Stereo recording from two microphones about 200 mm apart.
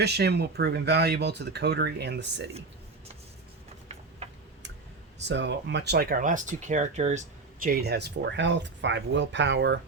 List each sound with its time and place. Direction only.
0.0 s speech: 55° right (ahead or behind)
4.2 s tick-tock: 35° right (ahead or behind)
5.3 s speech: 65° right (ahead or behind)